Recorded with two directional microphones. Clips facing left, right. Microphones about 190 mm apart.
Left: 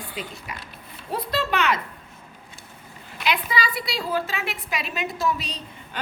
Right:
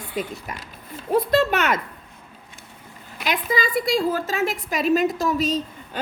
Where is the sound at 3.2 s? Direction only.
45° right (ahead or behind).